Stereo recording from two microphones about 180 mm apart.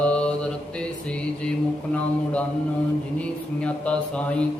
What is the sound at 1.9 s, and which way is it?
A man's voice, 5° left (ahead or behind).